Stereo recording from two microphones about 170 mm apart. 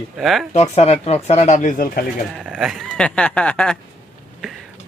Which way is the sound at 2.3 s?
5° right (ahead or behind).